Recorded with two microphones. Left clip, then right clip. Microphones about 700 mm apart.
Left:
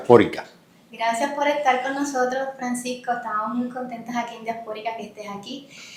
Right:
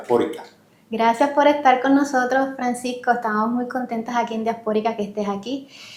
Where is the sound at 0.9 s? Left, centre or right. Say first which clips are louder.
Right 6 dB; right.